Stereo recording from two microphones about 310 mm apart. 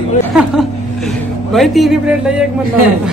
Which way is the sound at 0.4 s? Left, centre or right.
Centre.